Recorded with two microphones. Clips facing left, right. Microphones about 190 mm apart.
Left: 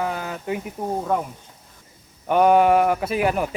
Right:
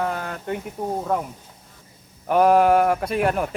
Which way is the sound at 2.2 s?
Centre (ahead or behind).